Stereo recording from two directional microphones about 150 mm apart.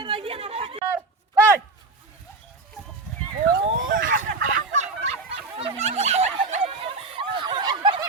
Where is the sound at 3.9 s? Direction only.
70° right (ahead or behind).